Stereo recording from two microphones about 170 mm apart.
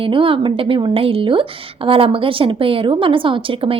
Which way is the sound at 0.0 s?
30° right (ahead or behind).